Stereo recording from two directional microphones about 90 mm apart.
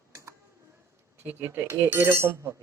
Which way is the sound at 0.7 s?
25° right (ahead or behind).